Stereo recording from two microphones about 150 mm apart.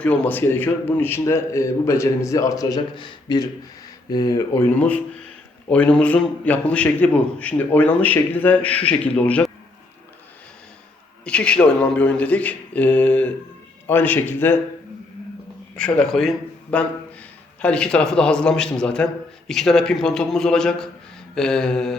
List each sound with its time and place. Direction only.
0.0 s a man's voice: 10° left (ahead or behind)
4.7 s a man's voice: 10° left (ahead or behind)
11.3 s a man's voice: 5° left (ahead or behind)
15.7 s a man's voice: 5° left (ahead or behind)